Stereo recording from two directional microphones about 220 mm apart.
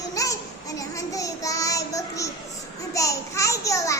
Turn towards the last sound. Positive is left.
turn(degrees=15)  # may be behind; listen again after turning